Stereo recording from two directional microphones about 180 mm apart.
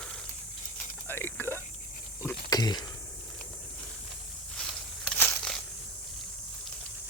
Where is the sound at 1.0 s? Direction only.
10° left (ahead or behind).